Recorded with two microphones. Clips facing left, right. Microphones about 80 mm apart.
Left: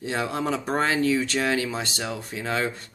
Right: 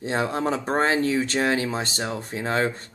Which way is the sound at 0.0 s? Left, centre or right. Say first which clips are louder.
Right 2 dB; right.